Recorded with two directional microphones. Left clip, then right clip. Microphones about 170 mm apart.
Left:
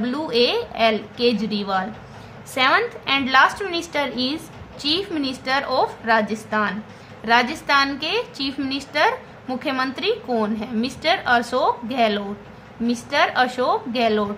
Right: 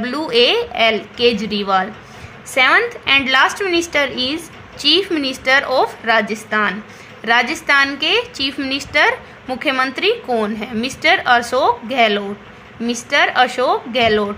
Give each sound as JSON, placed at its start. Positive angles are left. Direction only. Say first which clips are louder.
{"t": 0.0, "sound": "a woman's voice", "louder": "right 5 dB", "side_deg": -25}